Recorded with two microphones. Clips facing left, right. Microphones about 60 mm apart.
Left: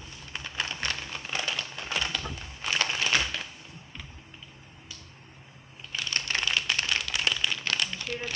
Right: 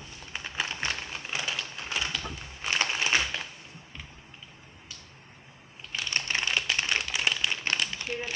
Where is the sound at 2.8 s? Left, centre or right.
Centre.